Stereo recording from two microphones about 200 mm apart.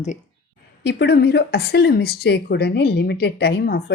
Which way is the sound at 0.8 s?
55° left (ahead or behind).